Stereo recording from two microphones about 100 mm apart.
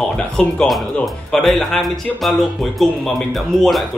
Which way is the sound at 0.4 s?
5° left (ahead or behind).